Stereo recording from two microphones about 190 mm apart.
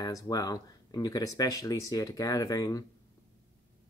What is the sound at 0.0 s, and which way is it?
Speech, 20° left (ahead or behind).